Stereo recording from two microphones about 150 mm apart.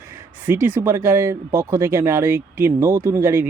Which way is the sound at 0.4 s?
15° right (ahead or behind).